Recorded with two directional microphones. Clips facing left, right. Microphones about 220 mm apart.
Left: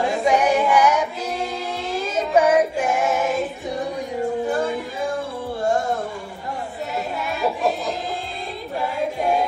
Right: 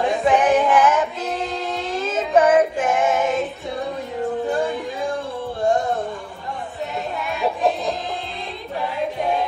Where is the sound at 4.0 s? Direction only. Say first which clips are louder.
Left 1 dB; 15° left (ahead or behind).